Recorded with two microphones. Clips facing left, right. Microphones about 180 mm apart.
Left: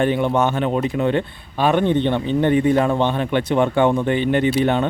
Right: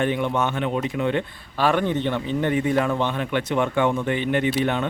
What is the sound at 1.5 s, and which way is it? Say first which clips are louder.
Speech: left 4 dB; 20° left (ahead or behind).